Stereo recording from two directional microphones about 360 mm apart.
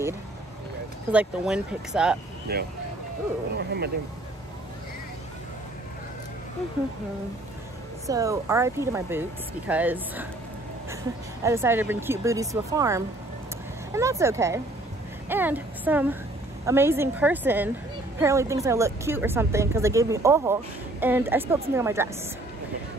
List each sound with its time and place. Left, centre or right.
1.1 s speech: centre
2.5 s speech: right
8.1 s a woman's voice: centre
11.4 s a woman's voice: centre